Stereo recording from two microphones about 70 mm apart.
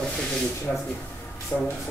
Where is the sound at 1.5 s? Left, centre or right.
Left.